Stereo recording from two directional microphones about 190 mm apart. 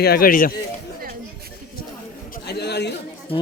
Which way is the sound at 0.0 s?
50° left (ahead or behind).